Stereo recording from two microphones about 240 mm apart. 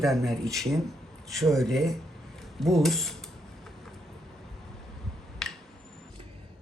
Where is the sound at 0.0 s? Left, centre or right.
Centre.